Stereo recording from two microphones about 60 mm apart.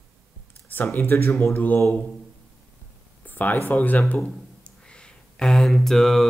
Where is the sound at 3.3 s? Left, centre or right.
Left.